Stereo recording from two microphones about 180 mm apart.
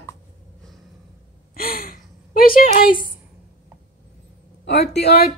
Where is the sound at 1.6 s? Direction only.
50° left (ahead or behind).